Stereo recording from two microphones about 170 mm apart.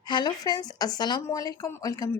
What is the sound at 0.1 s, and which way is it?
A woman's voice, 25° left (ahead or behind).